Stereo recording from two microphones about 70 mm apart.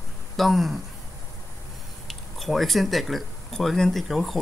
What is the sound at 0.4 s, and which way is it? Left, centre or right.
Speech, centre.